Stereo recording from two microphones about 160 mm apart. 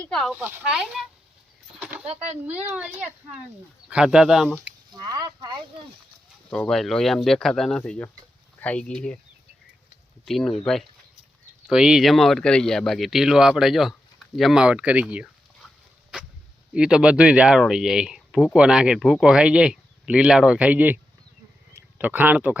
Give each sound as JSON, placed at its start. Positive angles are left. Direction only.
{"t": 0.0, "sound": "speech", "side_deg": 5}
{"t": 0.3, "sound": "speech", "side_deg": -10}
{"t": 1.8, "sound": "a sound", "side_deg": -10}
{"t": 2.7, "sound": "speech", "side_deg": -10}
{"t": 4.9, "sound": "speech", "side_deg": -25}
{"t": 6.5, "sound": "speech", "side_deg": 5}
{"t": 10.2, "sound": "speech", "side_deg": 0}
{"t": 16.7, "sound": "speech", "side_deg": -5}